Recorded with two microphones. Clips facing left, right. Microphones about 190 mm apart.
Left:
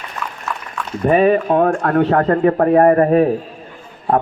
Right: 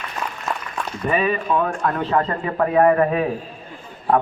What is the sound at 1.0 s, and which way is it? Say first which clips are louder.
Speech: left 8 dB; 50° left (ahead or behind).